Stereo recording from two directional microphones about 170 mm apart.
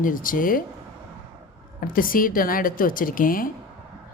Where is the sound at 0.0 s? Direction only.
55° left (ahead or behind).